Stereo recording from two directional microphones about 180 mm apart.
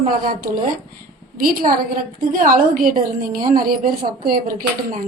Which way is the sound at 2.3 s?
50° right (ahead or behind).